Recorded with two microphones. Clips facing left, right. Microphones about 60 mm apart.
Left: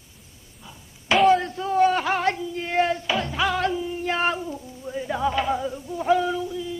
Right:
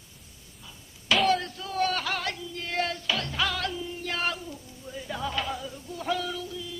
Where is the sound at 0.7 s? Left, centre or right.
Left.